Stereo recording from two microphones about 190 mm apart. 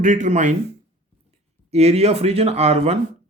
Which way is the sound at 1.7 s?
35° right (ahead or behind).